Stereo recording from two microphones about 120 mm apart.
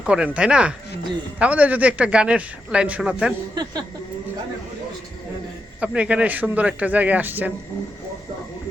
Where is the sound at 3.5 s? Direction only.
35° right (ahead or behind).